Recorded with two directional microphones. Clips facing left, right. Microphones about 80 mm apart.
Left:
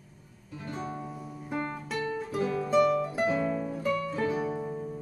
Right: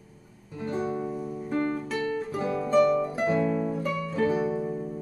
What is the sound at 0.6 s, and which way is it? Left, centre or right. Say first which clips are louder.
Music: right 7 dB; right.